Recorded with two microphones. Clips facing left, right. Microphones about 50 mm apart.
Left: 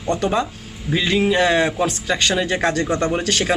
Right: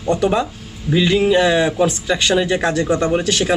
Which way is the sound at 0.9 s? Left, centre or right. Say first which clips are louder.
Right 4 dB; centre.